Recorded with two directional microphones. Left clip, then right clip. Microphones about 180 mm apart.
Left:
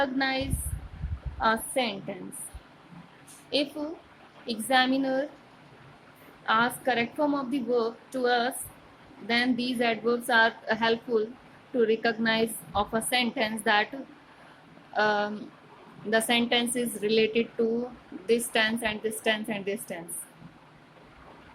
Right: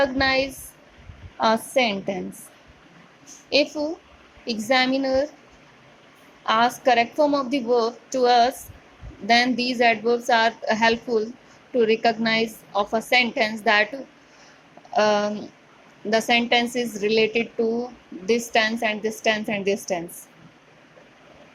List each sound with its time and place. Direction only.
0.0 s a woman's voice: 25° right (ahead or behind)
3.5 s a woman's voice: 25° right (ahead or behind)
6.4 s a woman's voice: 25° right (ahead or behind)
14.9 s a woman's voice: 25° right (ahead or behind)